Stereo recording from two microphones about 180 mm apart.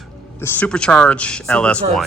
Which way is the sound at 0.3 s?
10° left (ahead or behind).